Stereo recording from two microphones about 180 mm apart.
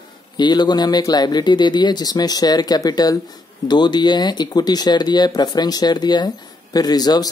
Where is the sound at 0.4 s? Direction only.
25° left (ahead or behind).